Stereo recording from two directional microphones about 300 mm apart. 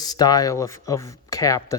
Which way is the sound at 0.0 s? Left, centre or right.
Centre.